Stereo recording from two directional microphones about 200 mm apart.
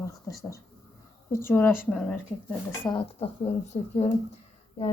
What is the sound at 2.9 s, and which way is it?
Speech, 25° left (ahead or behind).